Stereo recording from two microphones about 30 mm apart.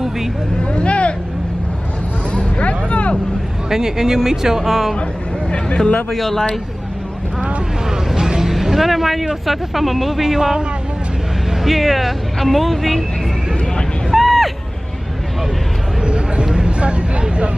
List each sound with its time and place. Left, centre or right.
0.6 s speech: left
2.6 s vehicle: left
3.7 s speech: centre
6.1 s speech: centre
7.9 s speech: centre
11.6 s speech: centre
14.1 s a sound: centre
16.0 s a sound: right
16.4 s vehicle: right